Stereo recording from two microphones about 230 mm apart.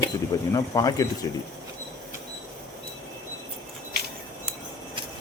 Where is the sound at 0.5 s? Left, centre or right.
Centre.